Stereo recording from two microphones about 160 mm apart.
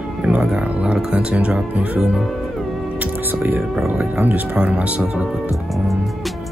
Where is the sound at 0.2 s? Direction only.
10° right (ahead or behind).